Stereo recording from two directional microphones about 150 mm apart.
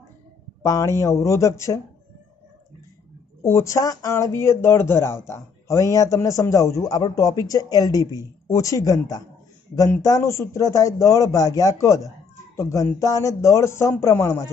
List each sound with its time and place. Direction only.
0.6 s speech: 20° left (ahead or behind)
3.4 s speech: 20° left (ahead or behind)